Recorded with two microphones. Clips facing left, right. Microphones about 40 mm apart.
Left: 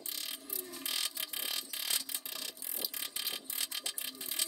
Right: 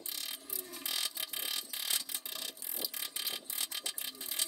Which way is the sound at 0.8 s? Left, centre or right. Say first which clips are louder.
Even; left.